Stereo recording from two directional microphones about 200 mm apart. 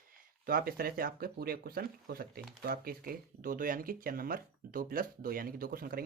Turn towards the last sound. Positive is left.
turn(degrees=-45)  # may be behind; listen again after turning